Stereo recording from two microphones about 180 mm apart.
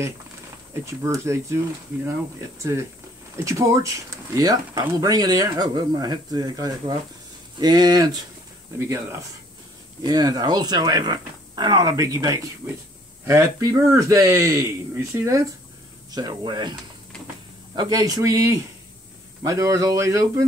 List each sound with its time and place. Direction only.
0.8 s a man's voice: 15° right (ahead or behind)
2.7 s a man's voice: 20° right (ahead or behind)
17.7 s a man's voice: 20° right (ahead or behind)